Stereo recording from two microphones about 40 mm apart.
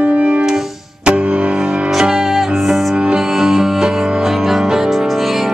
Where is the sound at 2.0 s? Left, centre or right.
Centre.